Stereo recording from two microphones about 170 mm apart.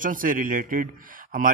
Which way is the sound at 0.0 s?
50° right (ahead or behind).